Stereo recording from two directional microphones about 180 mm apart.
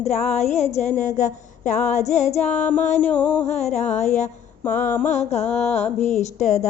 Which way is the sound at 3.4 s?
40° left (ahead or behind).